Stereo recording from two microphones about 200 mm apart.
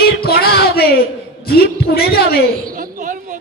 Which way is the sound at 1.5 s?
50° left (ahead or behind).